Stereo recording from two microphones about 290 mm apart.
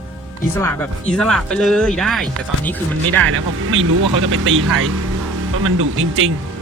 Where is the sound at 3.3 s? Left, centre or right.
Right.